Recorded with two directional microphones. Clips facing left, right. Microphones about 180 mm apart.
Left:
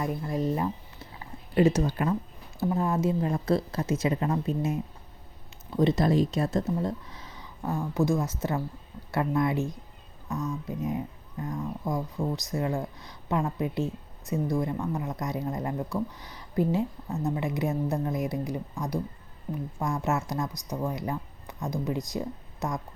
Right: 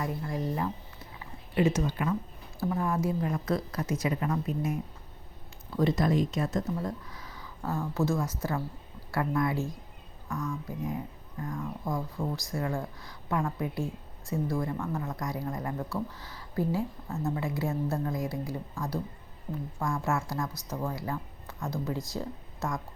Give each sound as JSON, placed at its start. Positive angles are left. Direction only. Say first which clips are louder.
{"t": 0.0, "sound": "speech", "louder": "left 4 dB", "side_deg": 20}
{"t": 1.5, "sound": "speech", "louder": "left 4 dB", "side_deg": 35}
{"t": 2.6, "sound": "a woman's voice", "louder": "left 3 dB", "side_deg": 25}